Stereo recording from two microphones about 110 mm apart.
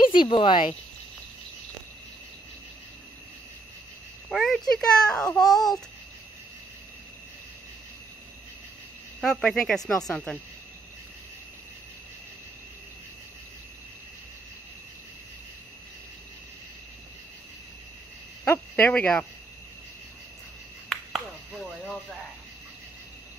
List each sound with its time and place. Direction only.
0.1 s speech: 50° left (ahead or behind)
4.3 s a child's voice: centre (ahead or behind)
9.2 s a child's voice: 5° left (ahead or behind)
18.4 s speech: 15° left (ahead or behind)
20.9 s a sound: centre (ahead or behind)